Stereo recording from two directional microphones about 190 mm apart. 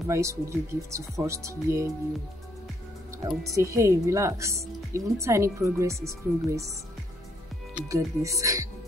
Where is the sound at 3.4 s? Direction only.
15° right (ahead or behind).